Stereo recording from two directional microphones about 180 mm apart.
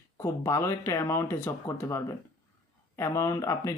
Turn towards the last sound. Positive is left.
turn(degrees=15)  # may be behind; listen again after turning